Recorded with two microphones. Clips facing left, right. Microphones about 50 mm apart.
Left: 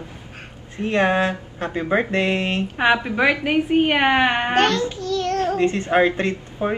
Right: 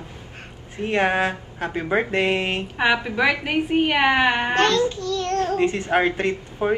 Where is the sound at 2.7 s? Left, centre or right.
Centre.